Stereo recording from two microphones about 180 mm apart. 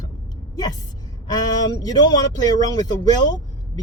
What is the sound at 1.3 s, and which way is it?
Speech, 20° left (ahead or behind).